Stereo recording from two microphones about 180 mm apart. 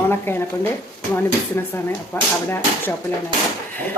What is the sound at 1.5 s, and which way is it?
A woman's voice, 15° left (ahead or behind).